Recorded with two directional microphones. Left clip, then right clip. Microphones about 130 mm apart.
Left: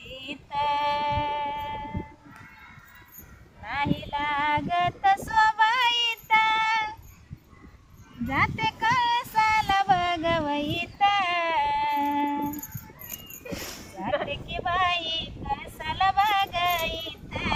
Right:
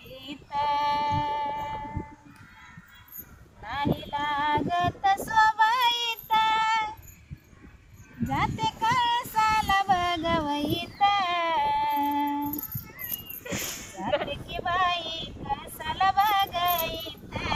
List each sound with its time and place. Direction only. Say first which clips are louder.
0.0 s female singing: left 4 dB; 5° left (ahead or behind)
3.6 s female singing: left 1 dB; 5° right (ahead or behind)
6.3 s child singing: left 2 dB; 15° right (ahead or behind)
6.6 s child singing: even; 50° right (ahead or behind)
8.3 s child singing: left 2 dB; 70° right (ahead or behind); by 12.5 s centre (ahead or behind)
13.4 s livestock: right 3 dB; 25° right (ahead or behind)
14.3 s child singing: left 1 dB; 5° right (ahead or behind)